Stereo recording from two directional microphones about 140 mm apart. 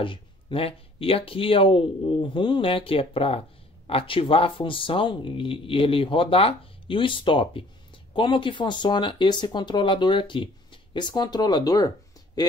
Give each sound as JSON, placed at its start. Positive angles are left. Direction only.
{"t": 0.0, "sound": "speech", "side_deg": 40}